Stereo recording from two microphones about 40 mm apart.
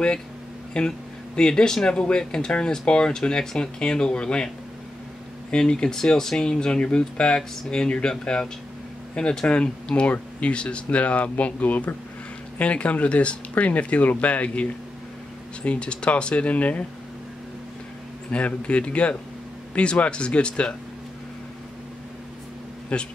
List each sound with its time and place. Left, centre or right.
0.7 s speech: left
5.5 s speech: left
18.3 s speech: left
22.9 s speech: left